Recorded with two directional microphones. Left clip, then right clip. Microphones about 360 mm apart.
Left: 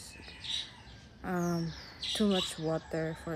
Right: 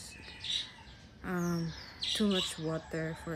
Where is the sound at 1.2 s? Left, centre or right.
Centre.